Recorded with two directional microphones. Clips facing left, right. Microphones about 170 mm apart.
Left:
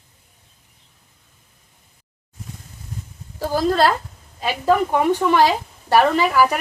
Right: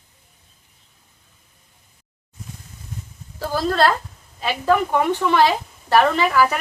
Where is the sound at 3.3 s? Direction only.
15° left (ahead or behind).